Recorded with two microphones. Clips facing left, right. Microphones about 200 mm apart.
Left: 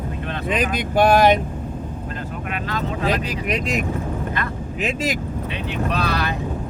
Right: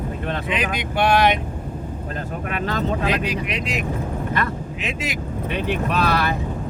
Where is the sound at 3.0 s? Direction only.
45° left (ahead or behind).